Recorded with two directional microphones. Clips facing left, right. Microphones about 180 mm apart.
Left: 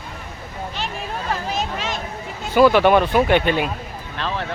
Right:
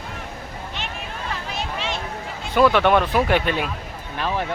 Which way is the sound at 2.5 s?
Centre (ahead or behind).